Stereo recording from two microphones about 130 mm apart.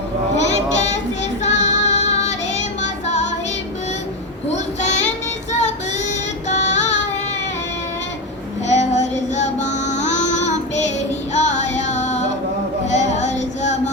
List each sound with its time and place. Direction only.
1.5 s music: 60° left (ahead or behind)
4.4 s child singing: 60° left (ahead or behind)
6.5 s music: 60° left (ahead or behind)
8.6 s female singing: 60° left (ahead or behind)
11.3 s music: 60° left (ahead or behind)